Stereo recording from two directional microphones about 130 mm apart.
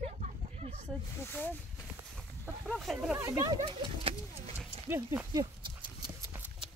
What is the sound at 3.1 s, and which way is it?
Speech, 20° right (ahead or behind).